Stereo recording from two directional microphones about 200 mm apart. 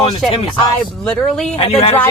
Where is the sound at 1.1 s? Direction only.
5° left (ahead or behind).